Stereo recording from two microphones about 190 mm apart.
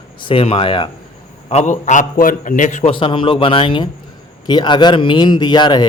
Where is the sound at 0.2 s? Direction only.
30° left (ahead or behind).